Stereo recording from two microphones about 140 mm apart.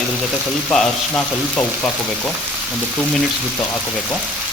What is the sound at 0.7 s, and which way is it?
Speech, 5° left (ahead or behind).